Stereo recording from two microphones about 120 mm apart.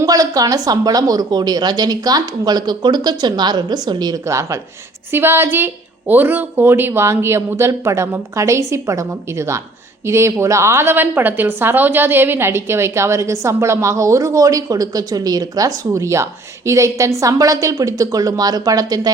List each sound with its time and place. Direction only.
0.0 s a woman's voice: 30° right (ahead or behind)